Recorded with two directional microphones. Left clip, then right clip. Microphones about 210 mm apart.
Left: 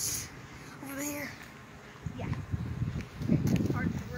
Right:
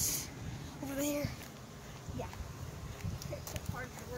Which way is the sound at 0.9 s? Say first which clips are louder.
Right 1 dB; 45° right (ahead or behind).